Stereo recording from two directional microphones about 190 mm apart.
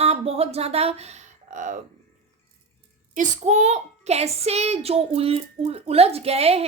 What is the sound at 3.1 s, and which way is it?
A child's voice, 40° right (ahead or behind).